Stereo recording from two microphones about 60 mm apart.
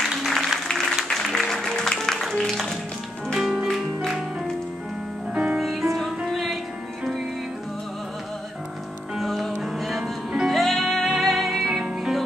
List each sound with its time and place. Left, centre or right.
0.0 s music: centre
5.3 s music: centre
5.6 s music: centre
9.1 s music: centre